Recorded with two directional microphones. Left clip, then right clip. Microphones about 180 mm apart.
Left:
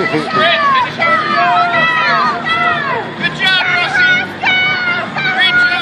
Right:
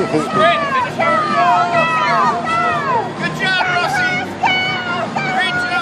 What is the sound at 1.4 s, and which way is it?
Run, 30° right (ahead or behind).